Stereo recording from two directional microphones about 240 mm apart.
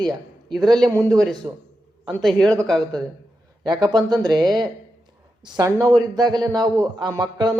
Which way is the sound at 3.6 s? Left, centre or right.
Centre.